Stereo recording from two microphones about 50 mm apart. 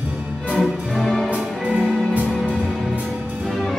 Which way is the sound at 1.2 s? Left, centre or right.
Right.